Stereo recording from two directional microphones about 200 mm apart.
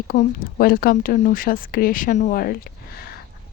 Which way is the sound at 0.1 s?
45° left (ahead or behind).